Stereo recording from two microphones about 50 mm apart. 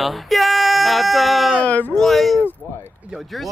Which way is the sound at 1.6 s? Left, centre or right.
Left.